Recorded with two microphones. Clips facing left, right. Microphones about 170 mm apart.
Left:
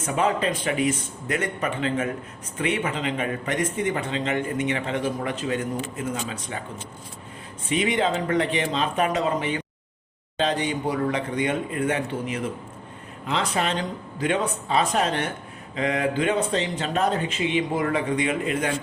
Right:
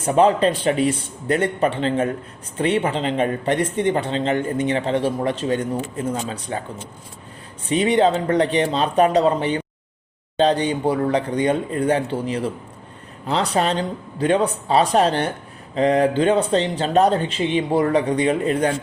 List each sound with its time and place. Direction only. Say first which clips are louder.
0.0 s speech: right 7 dB; 35° right (ahead or behind)
7.7 s speech: right 6 dB; 35° right (ahead or behind)